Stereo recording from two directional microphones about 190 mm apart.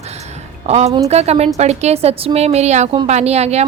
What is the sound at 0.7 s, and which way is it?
Speech, 35° right (ahead or behind).